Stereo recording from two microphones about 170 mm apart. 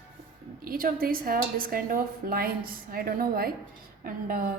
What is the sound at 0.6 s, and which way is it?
A woman's voice, 55° right (ahead or behind).